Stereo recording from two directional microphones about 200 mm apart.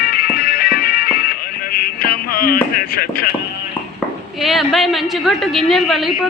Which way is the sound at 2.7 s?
50° left (ahead or behind).